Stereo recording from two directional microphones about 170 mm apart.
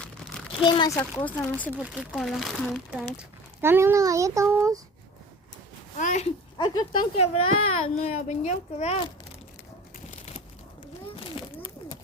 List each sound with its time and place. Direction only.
0.6 s a child's voice: 25° left (ahead or behind); by 1.7 s 10° left (ahead or behind)
1.8 s speech: 5° right (ahead or behind)
3.2 s a child's voice: 15° right (ahead or behind)
6.0 s speech: 45° left (ahead or behind)
6.6 s a child's voice: 25° left (ahead or behind)
10.1 s a sound: 40° left (ahead or behind)